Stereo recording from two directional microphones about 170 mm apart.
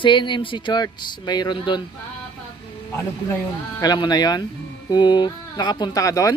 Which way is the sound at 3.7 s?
25° left (ahead or behind).